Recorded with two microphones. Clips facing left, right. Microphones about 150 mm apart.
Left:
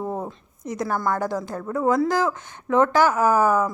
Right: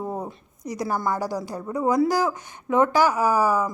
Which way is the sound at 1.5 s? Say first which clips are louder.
Even; 15° right (ahead or behind).